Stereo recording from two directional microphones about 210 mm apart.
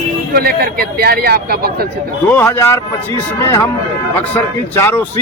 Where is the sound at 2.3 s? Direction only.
10° left (ahead or behind).